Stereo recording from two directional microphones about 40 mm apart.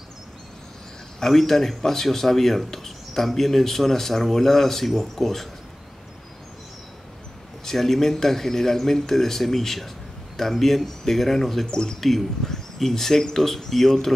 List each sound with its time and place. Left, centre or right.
1.2 s speech: centre
7.6 s speech: centre
11.7 s speech: centre
12.1 s speech: centre